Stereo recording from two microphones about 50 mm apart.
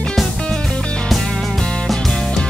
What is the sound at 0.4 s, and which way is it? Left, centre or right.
Music, centre.